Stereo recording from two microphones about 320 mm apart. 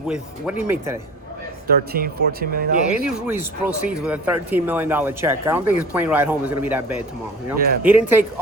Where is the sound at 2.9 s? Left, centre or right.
Centre.